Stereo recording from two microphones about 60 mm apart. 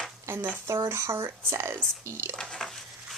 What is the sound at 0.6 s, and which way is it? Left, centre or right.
A woman's voice, right.